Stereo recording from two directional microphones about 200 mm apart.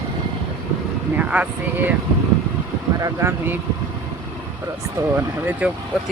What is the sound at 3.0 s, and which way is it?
Speech, 15° right (ahead or behind).